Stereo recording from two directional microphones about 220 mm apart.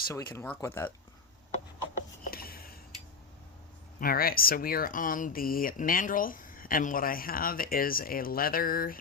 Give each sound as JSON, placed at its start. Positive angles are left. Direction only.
{"t": 0.1, "sound": "speech", "side_deg": 15}
{"t": 2.3, "sound": "a sound", "side_deg": 45}
{"t": 4.0, "sound": "speech", "side_deg": 40}